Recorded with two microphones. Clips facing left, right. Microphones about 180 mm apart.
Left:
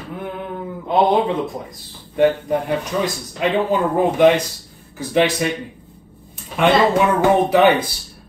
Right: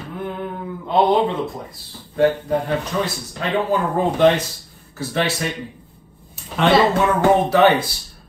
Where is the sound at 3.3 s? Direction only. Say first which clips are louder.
Left 2 dB; 15° left (ahead or behind).